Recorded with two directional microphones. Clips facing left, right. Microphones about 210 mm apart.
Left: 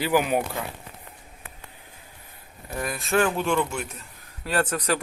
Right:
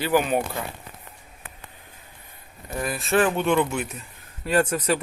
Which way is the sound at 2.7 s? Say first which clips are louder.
Right 2 dB; centre (ahead or behind).